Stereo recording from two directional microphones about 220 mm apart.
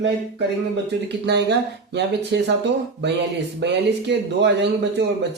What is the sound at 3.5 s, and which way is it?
Speech, 50° right (ahead or behind).